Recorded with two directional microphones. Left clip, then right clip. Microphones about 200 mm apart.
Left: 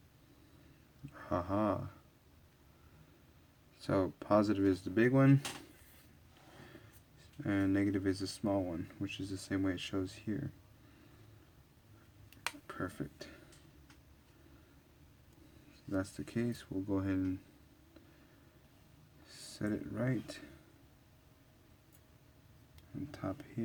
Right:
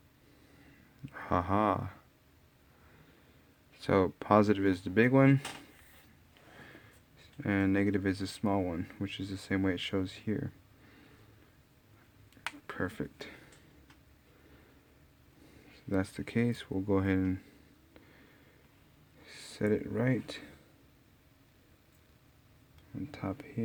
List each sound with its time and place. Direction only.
1.1 s a sound: 55° right (ahead or behind)
3.8 s speech: 50° right (ahead or behind)
7.4 s speech: 50° right (ahead or behind)
12.6 s a sound: 50° right (ahead or behind)
15.9 s speech: 50° right (ahead or behind)
19.3 s speech: 45° right (ahead or behind)